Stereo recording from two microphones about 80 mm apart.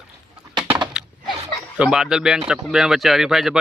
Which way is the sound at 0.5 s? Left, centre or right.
Right.